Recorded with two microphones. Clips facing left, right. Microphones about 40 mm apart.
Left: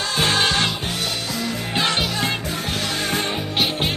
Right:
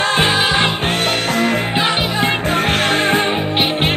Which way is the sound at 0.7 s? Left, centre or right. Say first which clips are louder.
Right 8 dB; right.